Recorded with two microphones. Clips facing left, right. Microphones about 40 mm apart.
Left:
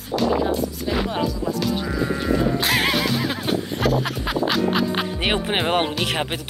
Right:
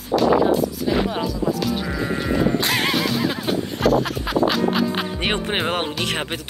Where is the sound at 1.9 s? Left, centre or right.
Centre.